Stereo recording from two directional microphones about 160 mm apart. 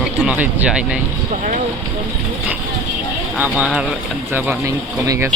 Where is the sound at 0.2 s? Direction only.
10° right (ahead or behind).